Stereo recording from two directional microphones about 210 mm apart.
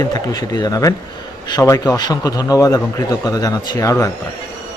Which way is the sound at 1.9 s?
20° left (ahead or behind).